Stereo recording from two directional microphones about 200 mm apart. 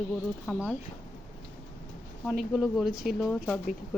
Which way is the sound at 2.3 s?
5° right (ahead or behind).